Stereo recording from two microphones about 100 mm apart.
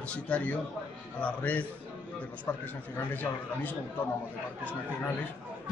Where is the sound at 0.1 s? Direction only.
15° left (ahead or behind).